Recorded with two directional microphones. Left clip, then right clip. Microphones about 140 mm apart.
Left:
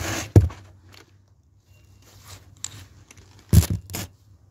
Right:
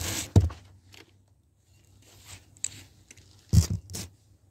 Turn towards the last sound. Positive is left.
turn(degrees=35)  # may be behind; listen again after turning